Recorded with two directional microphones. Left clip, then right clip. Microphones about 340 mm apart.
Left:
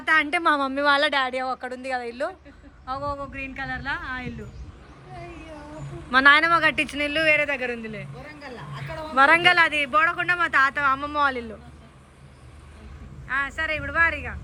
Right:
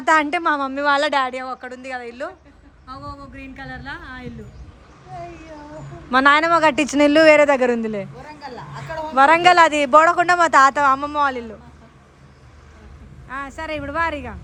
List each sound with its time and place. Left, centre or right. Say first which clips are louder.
0.0 s a woman's voice: right 4 dB; centre
6.1 s a woman's voice: right 2 dB; centre
13.2 s a woman's voice: left 3 dB; centre